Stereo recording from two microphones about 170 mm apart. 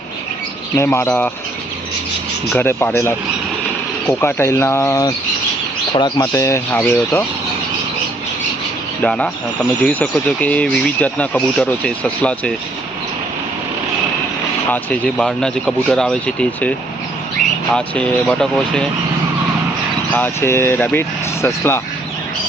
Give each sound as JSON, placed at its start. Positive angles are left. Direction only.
{"t": 0.8, "sound": "speech", "side_deg": 15}
{"t": 2.5, "sound": "speech", "side_deg": 10}
{"t": 4.2, "sound": "speech", "side_deg": 15}
{"t": 6.1, "sound": "speech", "side_deg": 15}
{"t": 9.0, "sound": "speech", "side_deg": 5}
{"t": 14.7, "sound": "speech", "side_deg": 5}
{"t": 20.1, "sound": "speech", "side_deg": 10}